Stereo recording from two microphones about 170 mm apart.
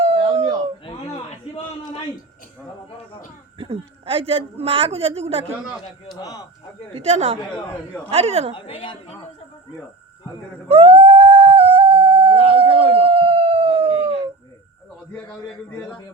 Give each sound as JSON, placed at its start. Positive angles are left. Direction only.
{"t": 0.0, "sound": "a sound", "side_deg": -35}
{"t": 3.6, "sound": "a woman's voice", "side_deg": -30}
{"t": 6.1, "sound": "speech", "side_deg": 25}
{"t": 6.9, "sound": "a woman's voice", "side_deg": -40}
{"t": 8.5, "sound": "a woman's voice", "side_deg": 30}
{"t": 10.7, "sound": "a sound", "side_deg": -35}
{"t": 12.5, "sound": "howl", "side_deg": -30}